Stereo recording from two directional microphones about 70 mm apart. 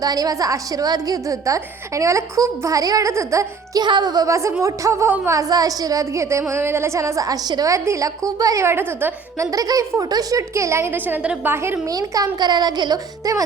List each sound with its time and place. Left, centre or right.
0.0 s a woman's voice: right
3.8 s a child's voice: right
4.6 s a woman's voice: right
7.7 s a woman's voice: right
8.6 s a woman's voice: right
9.4 s a woman's voice: right
10.9 s a woman's voice: right
11.9 s a child's voice: right